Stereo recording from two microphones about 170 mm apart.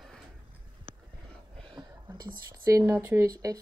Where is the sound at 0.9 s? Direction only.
55° right (ahead or behind).